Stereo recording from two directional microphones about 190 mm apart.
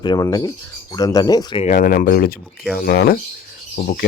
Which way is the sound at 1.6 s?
45° left (ahead or behind).